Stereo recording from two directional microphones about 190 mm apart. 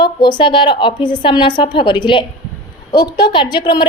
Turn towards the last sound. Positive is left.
turn(degrees=25)  # may be behind; listen again after turning